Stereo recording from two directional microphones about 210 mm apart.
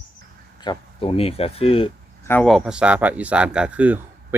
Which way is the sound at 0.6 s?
25° left (ahead or behind).